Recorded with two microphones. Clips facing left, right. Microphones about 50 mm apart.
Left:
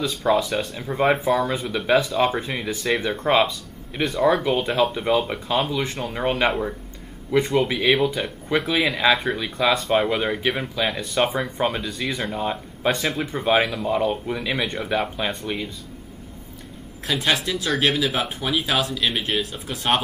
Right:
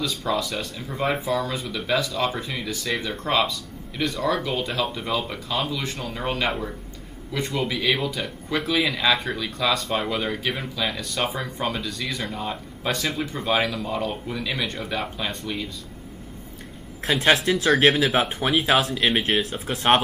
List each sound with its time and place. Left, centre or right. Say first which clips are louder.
0.3 s speech: left 7 dB; left
11.6 s speech: left 3 dB; left
11.9 s speech: left 3 dB; centre
12.3 s speech: left 4 dB; centre
17.0 s speech: right 3 dB; right